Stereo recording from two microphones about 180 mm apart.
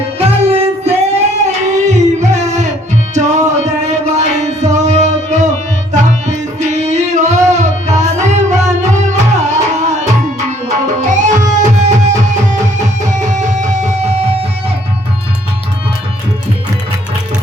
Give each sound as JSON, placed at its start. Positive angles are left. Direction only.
{"t": 0.2, "sound": "child singing", "side_deg": -35}
{"t": 3.2, "sound": "music", "side_deg": -40}